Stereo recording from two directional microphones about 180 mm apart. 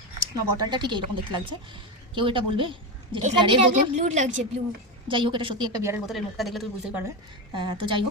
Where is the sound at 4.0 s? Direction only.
40° right (ahead or behind).